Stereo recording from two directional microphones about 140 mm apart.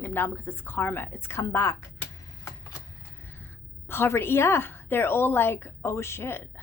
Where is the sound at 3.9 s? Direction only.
15° left (ahead or behind).